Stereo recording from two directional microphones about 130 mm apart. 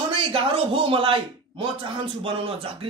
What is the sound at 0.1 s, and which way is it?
A man's voice, 40° right (ahead or behind).